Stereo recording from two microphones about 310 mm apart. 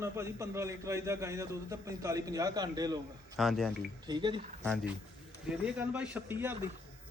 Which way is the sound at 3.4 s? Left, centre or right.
Centre.